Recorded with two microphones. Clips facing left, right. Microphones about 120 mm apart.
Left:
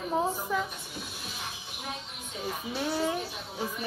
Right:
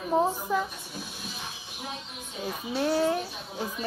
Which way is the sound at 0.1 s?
15° right (ahead or behind).